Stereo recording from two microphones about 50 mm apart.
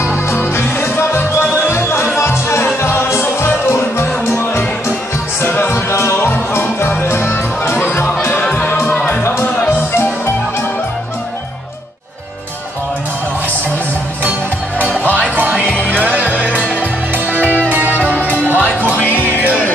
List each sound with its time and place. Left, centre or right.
0.3 s music: left
7.7 s music: left
9.7 s music: left
14.8 s music: right
15.6 s music: left
15.9 s music: right